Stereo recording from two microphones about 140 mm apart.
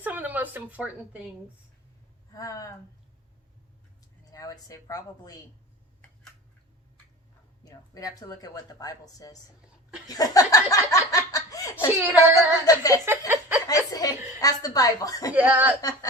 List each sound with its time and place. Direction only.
0.0 s a woman's voice: 10° right (ahead or behind)
2.3 s speech: 25° left (ahead or behind)
4.3 s speech: 25° left (ahead or behind)
7.6 s speech: 25° left (ahead or behind)
13.1 s a sound: 15° right (ahead or behind)
13.7 s chuckle: 25° left (ahead or behind)
15.3 s speech: 10° right (ahead or behind)
15.8 s speech: 25° left (ahead or behind)